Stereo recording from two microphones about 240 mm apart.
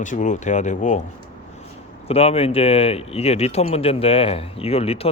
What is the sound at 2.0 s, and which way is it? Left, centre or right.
A man's voice, left.